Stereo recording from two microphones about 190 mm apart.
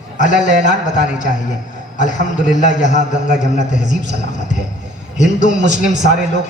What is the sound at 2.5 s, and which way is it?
A man's voice, 40° left (ahead or behind).